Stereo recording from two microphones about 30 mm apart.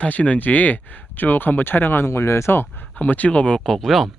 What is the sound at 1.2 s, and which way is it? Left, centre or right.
Speech, left.